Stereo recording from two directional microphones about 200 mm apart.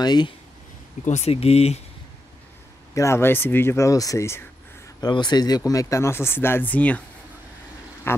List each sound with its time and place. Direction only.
0.0 s speech: 20° left (ahead or behind)
1.0 s speech: 35° left (ahead or behind)
2.9 s speech: 15° left (ahead or behind)